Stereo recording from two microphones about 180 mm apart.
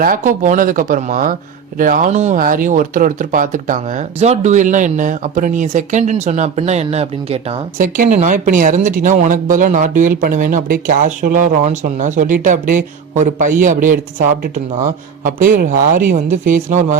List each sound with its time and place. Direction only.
0.0 s speech: 50° right (ahead or behind)
7.8 s speech: 50° right (ahead or behind)